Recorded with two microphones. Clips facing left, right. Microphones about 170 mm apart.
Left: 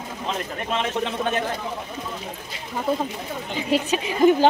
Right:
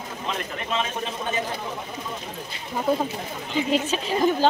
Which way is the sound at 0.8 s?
70° left (ahead or behind).